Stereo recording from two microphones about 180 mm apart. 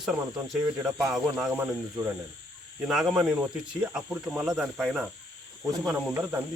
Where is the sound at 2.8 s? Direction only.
5° right (ahead or behind).